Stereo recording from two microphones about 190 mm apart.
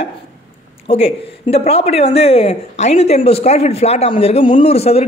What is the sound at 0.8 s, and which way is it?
A man's voice, 30° left (ahead or behind).